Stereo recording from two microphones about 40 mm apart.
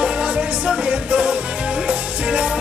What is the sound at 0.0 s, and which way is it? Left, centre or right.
Music, right.